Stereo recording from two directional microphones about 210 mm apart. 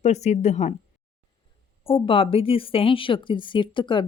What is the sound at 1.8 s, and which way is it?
A woman's voice, 25° left (ahead or behind).